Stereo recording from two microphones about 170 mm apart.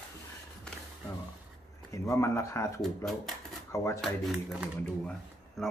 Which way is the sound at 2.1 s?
15° left (ahead or behind).